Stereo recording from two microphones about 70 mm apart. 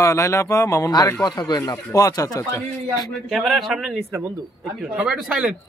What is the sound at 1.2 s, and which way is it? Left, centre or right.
Speech, left.